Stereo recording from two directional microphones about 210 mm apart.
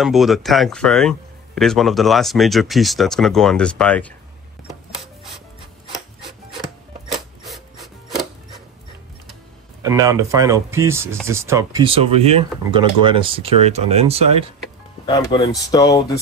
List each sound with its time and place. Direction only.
0.0 s a man's voice: centre (ahead or behind)
7.1 s filing: centre (ahead or behind)
9.8 s speech: 15° right (ahead or behind)
15.0 s speech: 20° left (ahead or behind)